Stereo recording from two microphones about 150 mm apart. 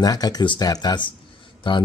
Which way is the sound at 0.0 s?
25° left (ahead or behind).